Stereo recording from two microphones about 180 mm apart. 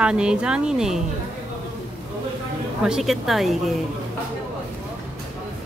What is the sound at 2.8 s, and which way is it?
Speech, centre (ahead or behind).